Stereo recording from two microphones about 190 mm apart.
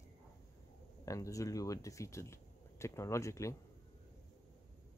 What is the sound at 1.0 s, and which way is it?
Speech, 15° left (ahead or behind).